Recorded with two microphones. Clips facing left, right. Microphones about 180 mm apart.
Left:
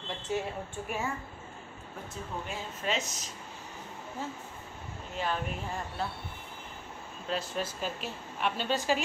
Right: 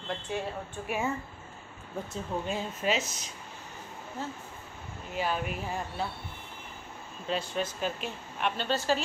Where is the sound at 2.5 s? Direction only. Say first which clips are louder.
Right 4 dB; 15° right (ahead or behind).